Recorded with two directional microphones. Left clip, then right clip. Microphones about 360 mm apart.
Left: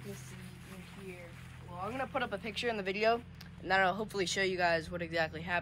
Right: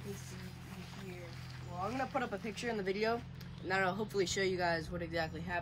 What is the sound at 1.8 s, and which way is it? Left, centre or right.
Speech, centre.